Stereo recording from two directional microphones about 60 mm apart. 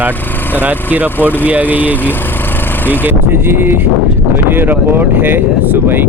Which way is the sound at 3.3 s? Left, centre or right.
Right.